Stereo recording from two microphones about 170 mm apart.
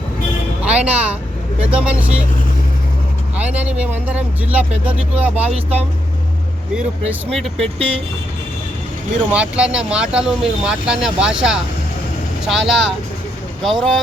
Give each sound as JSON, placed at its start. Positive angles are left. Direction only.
{"t": 0.6, "sound": "speech", "side_deg": -5}
{"t": 3.3, "sound": "speech", "side_deg": -10}
{"t": 7.3, "sound": "speech", "side_deg": 0}
{"t": 7.8, "sound": "speech", "side_deg": -35}
{"t": 9.3, "sound": "speech", "side_deg": -5}